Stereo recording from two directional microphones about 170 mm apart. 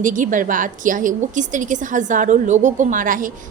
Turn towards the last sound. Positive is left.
turn(degrees=-50)  # may be behind; listen again after turning